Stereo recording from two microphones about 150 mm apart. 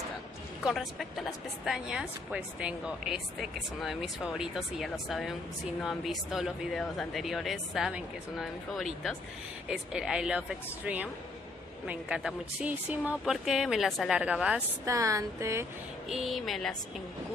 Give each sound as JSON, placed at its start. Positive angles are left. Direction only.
{"t": 0.7, "sound": "speech", "side_deg": 0}
{"t": 11.9, "sound": "speech", "side_deg": -5}
{"t": 14.9, "sound": "a sound", "side_deg": -20}
{"t": 16.1, "sound": "speech", "side_deg": 0}